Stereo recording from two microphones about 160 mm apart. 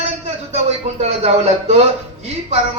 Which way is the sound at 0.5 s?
40° right (ahead or behind).